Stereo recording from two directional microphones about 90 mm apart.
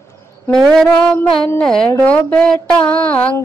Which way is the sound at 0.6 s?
5° left (ahead or behind).